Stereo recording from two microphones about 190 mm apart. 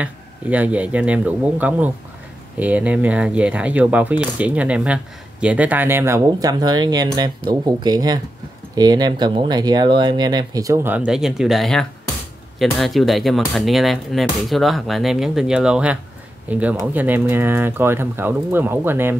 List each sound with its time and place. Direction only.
0.0 s speech: 5° right (ahead or behind)